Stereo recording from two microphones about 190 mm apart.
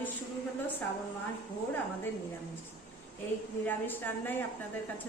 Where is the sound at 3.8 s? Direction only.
10° left (ahead or behind).